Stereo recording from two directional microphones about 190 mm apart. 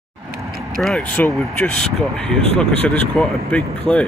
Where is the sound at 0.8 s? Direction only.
5° left (ahead or behind).